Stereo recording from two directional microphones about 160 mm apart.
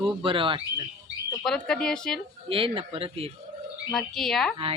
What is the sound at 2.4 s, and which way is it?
Speech, 35° right (ahead or behind).